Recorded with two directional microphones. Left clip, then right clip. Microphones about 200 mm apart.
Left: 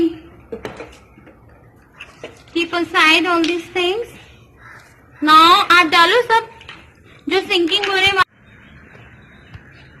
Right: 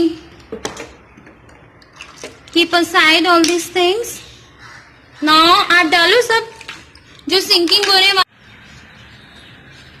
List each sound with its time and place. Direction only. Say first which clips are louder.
2.6 s a woman's voice: right 1 dB; 15° right (ahead or behind)
5.2 s a woman's voice: left 1 dB; centre (ahead or behind)
7.7 s a woman's voice: right 5 dB; 15° right (ahead or behind)